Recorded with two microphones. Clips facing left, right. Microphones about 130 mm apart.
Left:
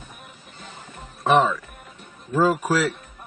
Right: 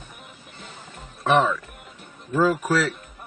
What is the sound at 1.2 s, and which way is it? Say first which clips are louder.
Speech: left 1 dB; 5° left (ahead or behind).